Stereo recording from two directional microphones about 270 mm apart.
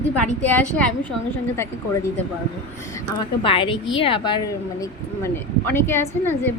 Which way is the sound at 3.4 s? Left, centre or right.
Centre.